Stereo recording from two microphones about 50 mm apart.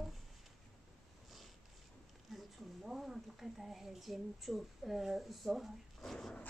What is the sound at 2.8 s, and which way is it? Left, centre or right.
Speech, centre.